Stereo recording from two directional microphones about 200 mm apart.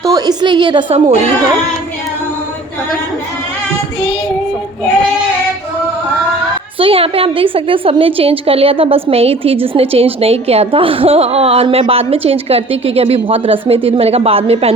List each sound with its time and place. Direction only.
0.0 s a woman's voice: 20° right (ahead or behind)
6.7 s a woman's voice: 25° right (ahead or behind)